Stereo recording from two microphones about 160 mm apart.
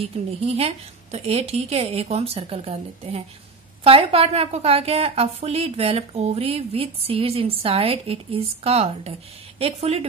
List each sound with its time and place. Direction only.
0.0 s a woman's voice: 40° right (ahead or behind)